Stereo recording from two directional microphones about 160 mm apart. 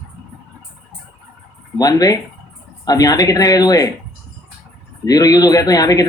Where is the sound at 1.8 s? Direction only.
25° left (ahead or behind).